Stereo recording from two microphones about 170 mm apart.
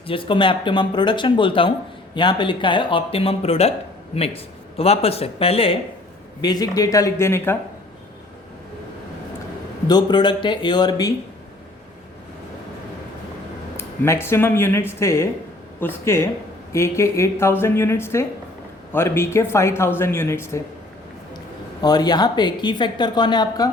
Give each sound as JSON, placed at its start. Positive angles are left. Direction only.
{"t": 0.1, "sound": "speech", "side_deg": 30}
{"t": 6.4, "sound": "speech", "side_deg": 25}
{"t": 9.8, "sound": "speech", "side_deg": 25}
{"t": 13.7, "sound": "speech", "side_deg": 15}
{"t": 21.8, "sound": "speech", "side_deg": 25}